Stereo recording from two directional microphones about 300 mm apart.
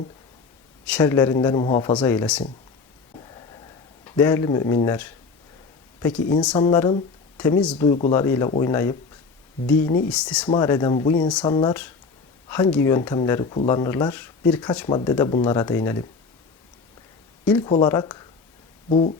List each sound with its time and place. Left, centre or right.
0.9 s speech: centre
4.0 s speech: centre
7.8 s speech: left
8.1 s speech: centre
10.1 s speech: centre
17.5 s speech: centre